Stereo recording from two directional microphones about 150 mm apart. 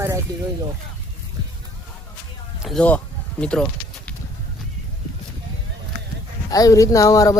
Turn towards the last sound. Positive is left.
turn(degrees=20)  # may be behind; listen again after turning